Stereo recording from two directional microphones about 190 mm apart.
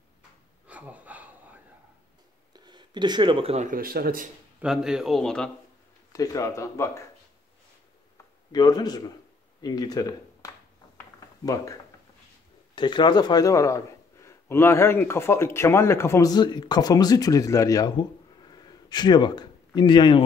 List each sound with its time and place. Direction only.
0.7 s a sound: 10° right (ahead or behind)
2.5 s speech: 20° right (ahead or behind); by 4.3 s 50° right (ahead or behind)
4.6 s speech: 5° right (ahead or behind)
6.1 s speech: 15° left (ahead or behind)
8.5 s a man's voice: 20° left (ahead or behind)